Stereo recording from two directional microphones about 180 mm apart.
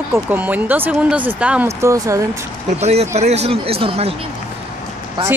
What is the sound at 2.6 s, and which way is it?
Speech, 35° right (ahead or behind).